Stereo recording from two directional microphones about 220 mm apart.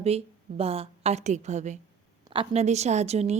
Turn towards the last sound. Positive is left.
turn(degrees=-30)  # may be behind; listen again after turning